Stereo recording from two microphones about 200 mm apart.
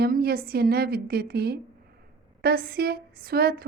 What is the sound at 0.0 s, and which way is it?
A woman's voice, 50° right (ahead or behind).